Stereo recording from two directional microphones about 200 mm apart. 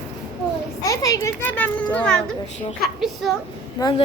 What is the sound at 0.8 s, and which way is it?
Speech, 15° left (ahead or behind).